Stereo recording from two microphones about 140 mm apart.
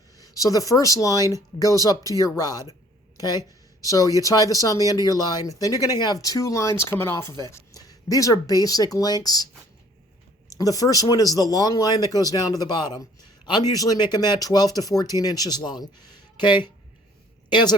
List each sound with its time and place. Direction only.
0.2 s speech: 25° left (ahead or behind)
10.5 s speech: 25° left (ahead or behind)